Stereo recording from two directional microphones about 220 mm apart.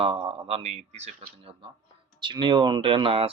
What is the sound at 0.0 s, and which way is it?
Speech, 25° right (ahead or behind).